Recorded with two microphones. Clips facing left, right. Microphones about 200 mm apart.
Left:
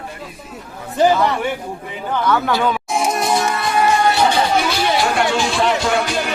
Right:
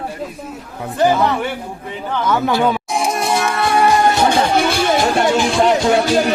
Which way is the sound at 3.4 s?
60° right (ahead or behind).